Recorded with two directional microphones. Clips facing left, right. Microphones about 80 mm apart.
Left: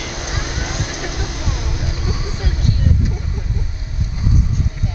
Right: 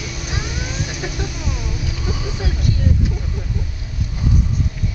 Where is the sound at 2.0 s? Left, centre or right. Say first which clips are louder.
Right 1 dB; centre.